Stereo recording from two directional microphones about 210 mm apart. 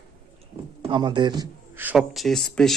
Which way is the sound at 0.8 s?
20° right (ahead or behind).